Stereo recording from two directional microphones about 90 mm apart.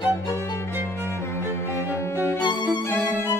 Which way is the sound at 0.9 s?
30° left (ahead or behind).